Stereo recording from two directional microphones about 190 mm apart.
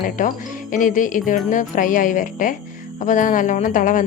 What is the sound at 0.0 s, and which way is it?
A woman's voice, 40° left (ahead or behind).